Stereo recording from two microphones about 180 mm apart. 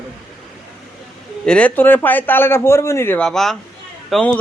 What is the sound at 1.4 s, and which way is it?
A man's voice, 5° left (ahead or behind).